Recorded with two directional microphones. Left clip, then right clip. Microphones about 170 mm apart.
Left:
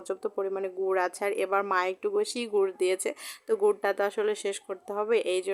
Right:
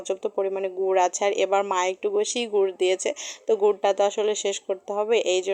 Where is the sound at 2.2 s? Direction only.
45° left (ahead or behind).